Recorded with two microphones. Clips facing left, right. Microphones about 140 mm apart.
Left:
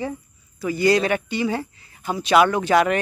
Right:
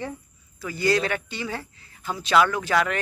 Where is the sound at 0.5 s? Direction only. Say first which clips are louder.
Left 5 dB; 15° left (ahead or behind).